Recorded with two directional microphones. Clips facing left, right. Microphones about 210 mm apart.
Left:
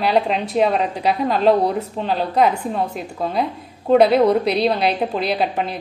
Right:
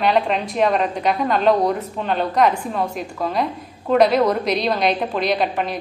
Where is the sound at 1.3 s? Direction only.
30° left (ahead or behind).